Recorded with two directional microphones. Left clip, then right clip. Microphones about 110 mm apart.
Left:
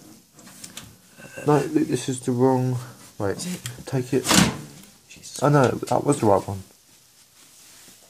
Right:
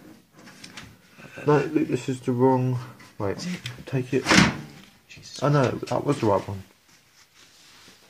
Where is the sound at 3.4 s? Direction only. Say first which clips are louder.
Left 1 dB; 35° left (ahead or behind).